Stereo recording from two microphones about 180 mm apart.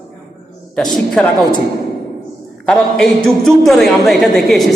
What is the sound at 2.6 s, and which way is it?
A man's voice, 5° left (ahead or behind).